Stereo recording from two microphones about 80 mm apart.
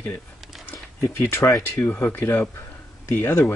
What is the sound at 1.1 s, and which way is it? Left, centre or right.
Speech, left.